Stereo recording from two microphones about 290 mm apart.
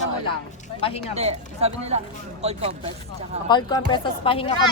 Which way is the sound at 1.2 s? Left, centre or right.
Right.